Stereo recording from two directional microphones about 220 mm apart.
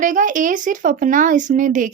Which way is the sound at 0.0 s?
35° right (ahead or behind).